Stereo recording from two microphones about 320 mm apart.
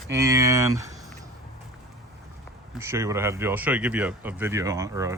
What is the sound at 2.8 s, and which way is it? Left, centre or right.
Speech, centre.